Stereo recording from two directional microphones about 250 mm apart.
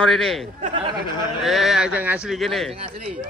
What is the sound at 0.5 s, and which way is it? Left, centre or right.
Speech, right.